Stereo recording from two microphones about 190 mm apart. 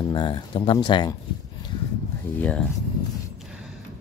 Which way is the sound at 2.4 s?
5° left (ahead or behind).